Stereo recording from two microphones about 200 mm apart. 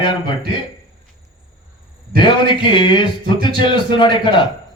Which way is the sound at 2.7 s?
25° left (ahead or behind).